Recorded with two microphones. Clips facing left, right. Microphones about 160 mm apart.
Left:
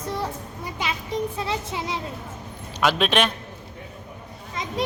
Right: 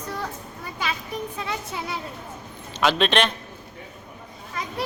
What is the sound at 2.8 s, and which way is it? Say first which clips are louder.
Speech: even; 5° left (ahead or behind).